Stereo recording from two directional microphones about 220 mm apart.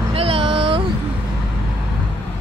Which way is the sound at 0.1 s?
25° right (ahead or behind).